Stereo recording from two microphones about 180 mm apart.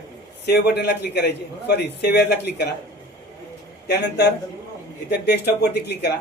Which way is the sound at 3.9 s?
65° left (ahead or behind).